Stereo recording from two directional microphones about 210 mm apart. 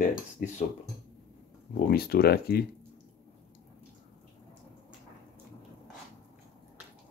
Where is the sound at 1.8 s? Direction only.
45° left (ahead or behind).